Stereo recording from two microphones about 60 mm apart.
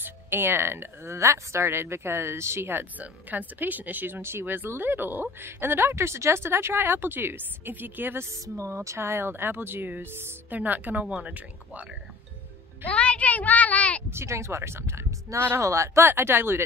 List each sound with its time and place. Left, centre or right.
0.0 s speech: right
8.5 s speech: right
12.8 s a child's voice: left
14.1 s speech: right
15.3 s speech: right
15.6 s speech: right
16.2 s speech: right